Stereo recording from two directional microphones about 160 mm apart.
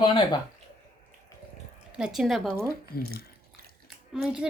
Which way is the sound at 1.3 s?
20° left (ahead or behind).